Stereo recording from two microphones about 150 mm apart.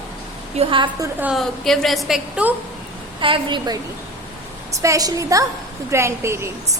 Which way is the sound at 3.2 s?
35° right (ahead or behind).